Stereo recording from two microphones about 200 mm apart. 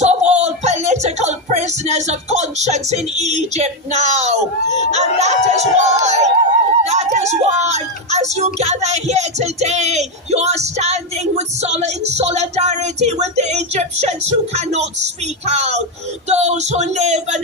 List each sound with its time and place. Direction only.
0.0 s music: 35° right (ahead or behind)
6.8 s a sound: 35° right (ahead or behind)
8.5 s speech: 35° right (ahead or behind)